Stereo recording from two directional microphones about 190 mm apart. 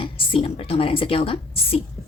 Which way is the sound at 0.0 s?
25° left (ahead or behind).